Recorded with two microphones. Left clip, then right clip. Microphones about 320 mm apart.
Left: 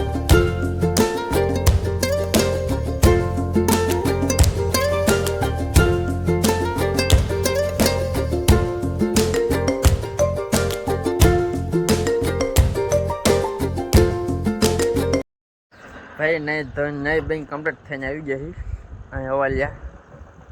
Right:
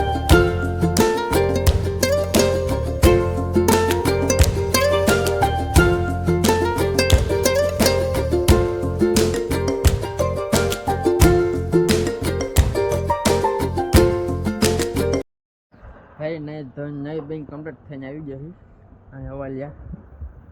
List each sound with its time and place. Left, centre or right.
0.0 s music: centre
16.5 s speech: left
19.1 s speech: left